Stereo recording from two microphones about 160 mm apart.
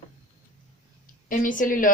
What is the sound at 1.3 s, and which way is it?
Speech, 55° left (ahead or behind).